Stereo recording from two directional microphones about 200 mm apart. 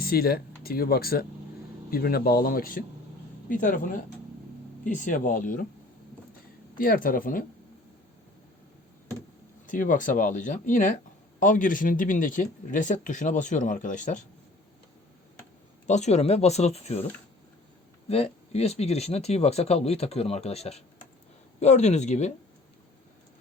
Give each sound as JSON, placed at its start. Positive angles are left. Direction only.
{"t": 0.0, "sound": "speech", "side_deg": 50}
{"t": 4.8, "sound": "speech", "side_deg": 40}
{"t": 6.7, "sound": "speech", "side_deg": 45}
{"t": 9.6, "sound": "speech", "side_deg": 40}
{"t": 15.9, "sound": "speech", "side_deg": 35}
{"t": 18.1, "sound": "speech", "side_deg": 30}